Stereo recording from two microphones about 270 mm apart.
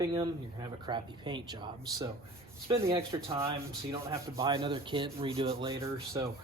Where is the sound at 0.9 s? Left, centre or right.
Centre.